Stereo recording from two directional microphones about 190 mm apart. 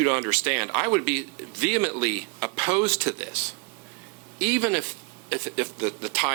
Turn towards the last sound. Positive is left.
turn(degrees=-10)  # may be behind; listen again after turning